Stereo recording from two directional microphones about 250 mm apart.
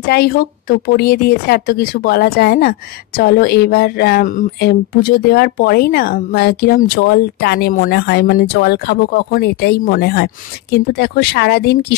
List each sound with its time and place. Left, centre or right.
0.0 s speech: left